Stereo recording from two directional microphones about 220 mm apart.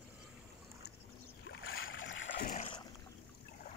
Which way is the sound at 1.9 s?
60° left (ahead or behind).